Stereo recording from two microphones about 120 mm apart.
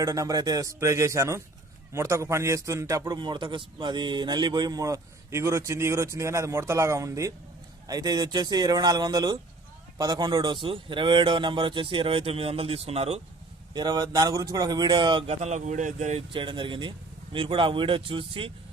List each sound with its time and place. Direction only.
0.0 s a man's voice: 30° right (ahead or behind)
3.0 s a man's voice: 40° right (ahead or behind); by 13.2 s 60° right (ahead or behind)
13.7 s speech: 35° right (ahead or behind)
15.3 s speech: 75° right (ahead or behind)
16.3 s speech: 45° right (ahead or behind)